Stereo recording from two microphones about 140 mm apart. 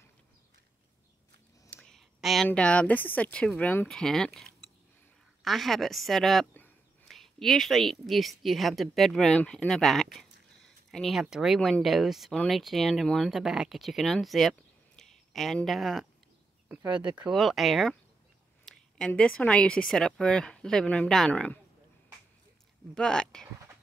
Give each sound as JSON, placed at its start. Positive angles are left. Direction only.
{"t": 1.8, "sound": "a woman's voice", "side_deg": 0}
{"t": 16.9, "sound": "speech", "side_deg": -35}
{"t": 17.2, "sound": "a woman's voice", "side_deg": 0}
{"t": 22.9, "sound": "a woman's voice", "side_deg": 5}